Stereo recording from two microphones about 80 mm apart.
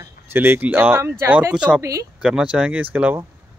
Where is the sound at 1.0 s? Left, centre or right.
Right.